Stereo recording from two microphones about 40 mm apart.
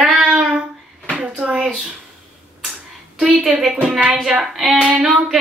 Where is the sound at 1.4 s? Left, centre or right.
Right.